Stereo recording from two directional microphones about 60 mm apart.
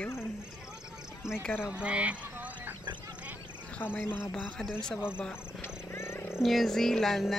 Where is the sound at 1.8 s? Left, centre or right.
Centre.